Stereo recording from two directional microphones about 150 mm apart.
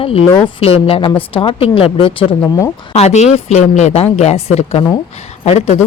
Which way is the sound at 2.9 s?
45° left (ahead or behind).